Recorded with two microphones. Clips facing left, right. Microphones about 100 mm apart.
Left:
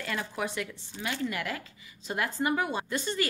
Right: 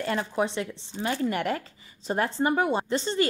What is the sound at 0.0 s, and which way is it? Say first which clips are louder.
A woman's voice: right 6 dB; 35° right (ahead or behind).